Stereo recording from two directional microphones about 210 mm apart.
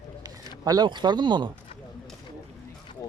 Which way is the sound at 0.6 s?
20° right (ahead or behind).